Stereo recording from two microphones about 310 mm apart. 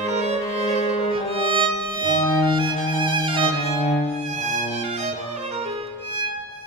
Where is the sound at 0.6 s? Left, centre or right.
Left.